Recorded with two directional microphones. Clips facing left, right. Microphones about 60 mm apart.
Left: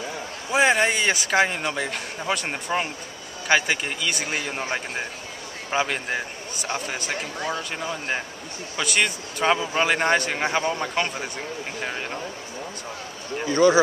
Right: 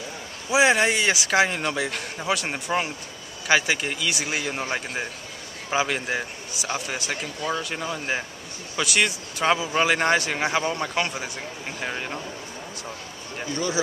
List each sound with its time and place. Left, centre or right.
0.5 s a man's voice: centre
13.5 s speech: left